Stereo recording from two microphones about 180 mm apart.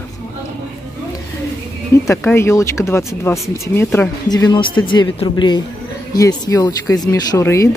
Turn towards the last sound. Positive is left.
turn(degrees=15)  # may be behind; listen again after turning